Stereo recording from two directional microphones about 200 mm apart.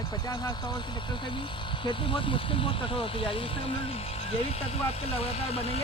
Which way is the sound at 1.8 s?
25° left (ahead or behind).